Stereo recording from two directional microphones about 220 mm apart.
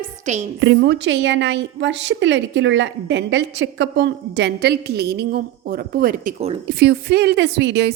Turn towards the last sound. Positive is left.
turn(degrees=-50)  # may be behind; listen again after turning